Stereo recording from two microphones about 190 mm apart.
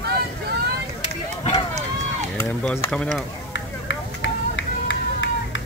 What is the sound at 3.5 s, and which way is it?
Run, 80° left.